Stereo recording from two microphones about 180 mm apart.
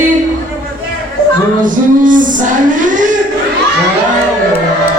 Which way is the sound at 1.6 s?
45° right (ahead or behind).